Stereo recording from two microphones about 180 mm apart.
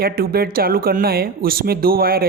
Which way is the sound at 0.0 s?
55° right (ahead or behind).